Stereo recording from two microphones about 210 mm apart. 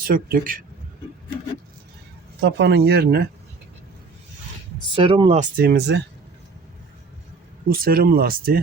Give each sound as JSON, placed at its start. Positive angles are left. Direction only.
{"t": 0.0, "sound": "speech", "side_deg": -45}
{"t": 2.4, "sound": "speech", "side_deg": -55}
{"t": 4.9, "sound": "speech", "side_deg": -25}
{"t": 5.4, "sound": "speech", "side_deg": -45}
{"t": 7.7, "sound": "speech", "side_deg": -45}